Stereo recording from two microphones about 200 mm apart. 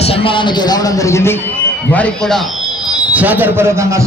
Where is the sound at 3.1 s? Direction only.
10° right (ahead or behind).